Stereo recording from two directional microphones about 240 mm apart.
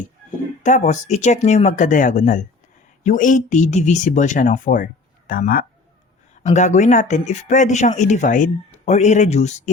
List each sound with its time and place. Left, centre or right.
0.6 s speech: left